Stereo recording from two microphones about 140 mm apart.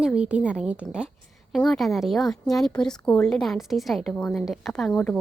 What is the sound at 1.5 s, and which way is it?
A woman's voice, 5° left (ahead or behind).